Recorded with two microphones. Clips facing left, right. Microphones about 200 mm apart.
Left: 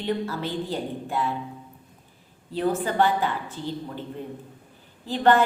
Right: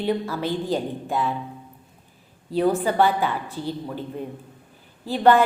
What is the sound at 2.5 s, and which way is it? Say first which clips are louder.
A woman's voice: right 4 dB; 15° right (ahead or behind).